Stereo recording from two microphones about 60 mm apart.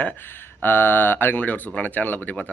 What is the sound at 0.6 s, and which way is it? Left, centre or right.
Speech, left.